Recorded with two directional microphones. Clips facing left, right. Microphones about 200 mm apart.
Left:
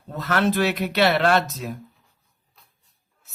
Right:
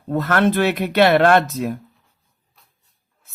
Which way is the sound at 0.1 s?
55° right (ahead or behind).